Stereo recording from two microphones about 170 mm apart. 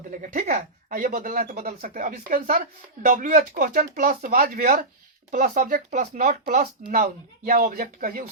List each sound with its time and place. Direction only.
0.1 s speech: 55° right (ahead or behind)